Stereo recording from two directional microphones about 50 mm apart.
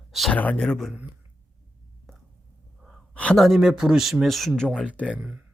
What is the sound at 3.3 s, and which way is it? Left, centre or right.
Speech, centre.